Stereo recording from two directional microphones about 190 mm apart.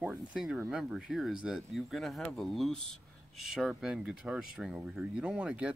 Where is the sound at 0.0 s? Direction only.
5° right (ahead or behind).